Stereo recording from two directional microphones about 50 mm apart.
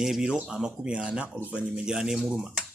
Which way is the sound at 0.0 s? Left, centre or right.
Centre.